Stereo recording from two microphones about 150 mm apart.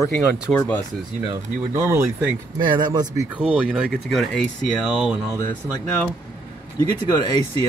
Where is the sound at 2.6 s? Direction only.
30° right (ahead or behind).